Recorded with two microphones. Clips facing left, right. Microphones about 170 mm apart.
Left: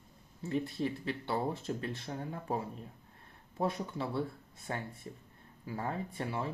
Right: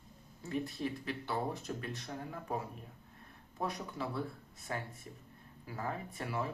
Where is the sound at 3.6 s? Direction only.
25° left (ahead or behind).